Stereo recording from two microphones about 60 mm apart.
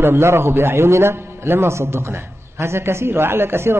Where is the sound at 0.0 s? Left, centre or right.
Right.